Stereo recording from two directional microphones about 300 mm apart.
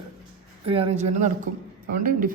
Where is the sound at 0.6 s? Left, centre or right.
Right.